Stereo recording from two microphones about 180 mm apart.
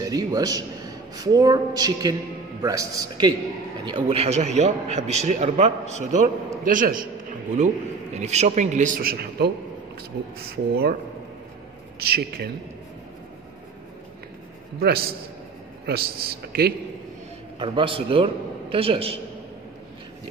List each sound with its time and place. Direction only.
0.0 s a man's voice: 20° right (ahead or behind); by 9.5 s 55° right (ahead or behind)
10.5 s a man's voice: 60° right (ahead or behind)
12.1 s a man's voice: 60° right (ahead or behind)
14.8 s a man's voice: 60° right (ahead or behind)
17.6 s a man's voice: 30° right (ahead or behind)